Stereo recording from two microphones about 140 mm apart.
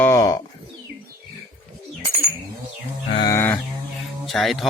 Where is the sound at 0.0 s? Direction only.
20° left (ahead or behind).